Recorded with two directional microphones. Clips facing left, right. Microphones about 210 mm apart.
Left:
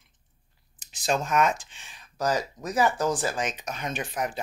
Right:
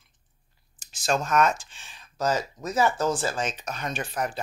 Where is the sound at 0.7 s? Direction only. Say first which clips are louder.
Right 1 dB; 20° left (ahead or behind).